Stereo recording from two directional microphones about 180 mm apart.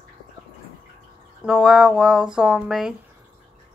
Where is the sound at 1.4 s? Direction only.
Centre (ahead or behind).